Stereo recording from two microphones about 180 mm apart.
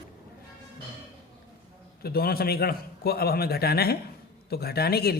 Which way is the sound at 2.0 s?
55° left (ahead or behind).